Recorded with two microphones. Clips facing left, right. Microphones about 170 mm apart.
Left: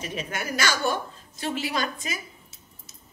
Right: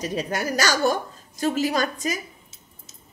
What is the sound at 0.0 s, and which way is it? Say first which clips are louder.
A woman's voice: right 6 dB; 40° right (ahead or behind).